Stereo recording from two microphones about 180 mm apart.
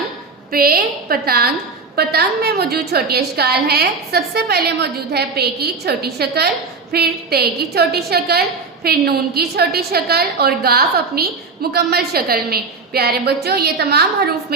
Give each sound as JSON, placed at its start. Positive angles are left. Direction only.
{"t": 0.5, "sound": "a woman's voice", "side_deg": -55}